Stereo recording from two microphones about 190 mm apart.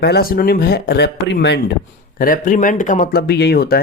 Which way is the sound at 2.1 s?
50° left (ahead or behind).